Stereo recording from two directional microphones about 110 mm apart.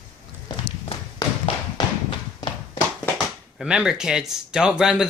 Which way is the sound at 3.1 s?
5° right (ahead or behind).